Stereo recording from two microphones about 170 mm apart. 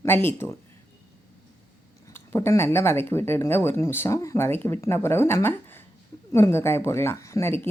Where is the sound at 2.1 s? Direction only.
15° left (ahead or behind).